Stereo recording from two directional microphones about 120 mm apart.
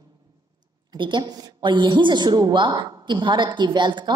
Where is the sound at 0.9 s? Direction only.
40° right (ahead or behind).